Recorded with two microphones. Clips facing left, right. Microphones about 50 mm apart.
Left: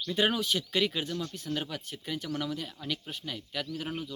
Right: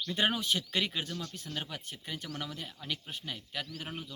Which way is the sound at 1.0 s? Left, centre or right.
Centre.